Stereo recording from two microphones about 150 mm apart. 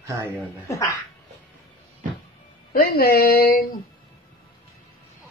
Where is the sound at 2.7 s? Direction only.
90° left.